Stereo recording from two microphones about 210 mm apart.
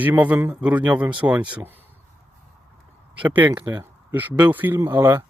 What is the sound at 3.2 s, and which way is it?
Speech, 5° right (ahead or behind).